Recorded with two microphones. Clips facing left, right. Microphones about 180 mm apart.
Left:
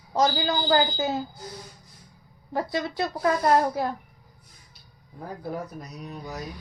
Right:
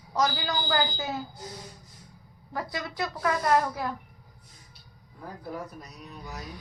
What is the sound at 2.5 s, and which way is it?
Speech, 25° left (ahead or behind).